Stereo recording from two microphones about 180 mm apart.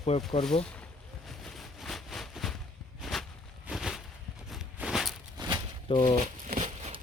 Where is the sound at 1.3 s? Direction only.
Centre (ahead or behind).